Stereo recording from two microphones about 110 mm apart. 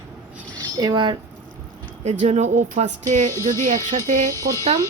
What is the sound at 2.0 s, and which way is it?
Speech, 85° right.